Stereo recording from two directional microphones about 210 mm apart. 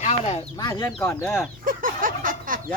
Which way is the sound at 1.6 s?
40° right (ahead or behind).